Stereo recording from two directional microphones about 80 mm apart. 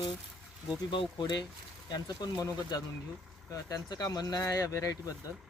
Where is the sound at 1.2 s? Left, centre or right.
Left.